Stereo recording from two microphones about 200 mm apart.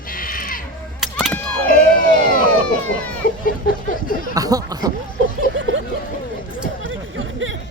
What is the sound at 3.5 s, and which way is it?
Speech, 45° left (ahead or behind).